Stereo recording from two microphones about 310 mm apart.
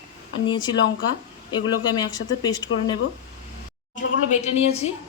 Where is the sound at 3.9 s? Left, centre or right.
Left.